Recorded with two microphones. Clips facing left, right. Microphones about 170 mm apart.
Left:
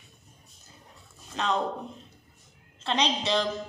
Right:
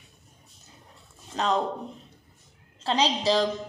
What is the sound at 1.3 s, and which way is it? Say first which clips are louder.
Speech: right 3 dB; 35° right (ahead or behind).